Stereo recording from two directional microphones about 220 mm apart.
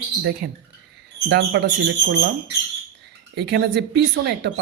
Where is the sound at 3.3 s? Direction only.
50° right (ahead or behind).